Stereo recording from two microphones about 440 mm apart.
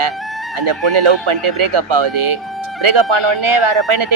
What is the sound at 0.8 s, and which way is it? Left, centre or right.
Speech, right.